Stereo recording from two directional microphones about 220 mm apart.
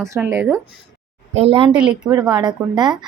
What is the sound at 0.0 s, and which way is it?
Speech, 15° right (ahead or behind).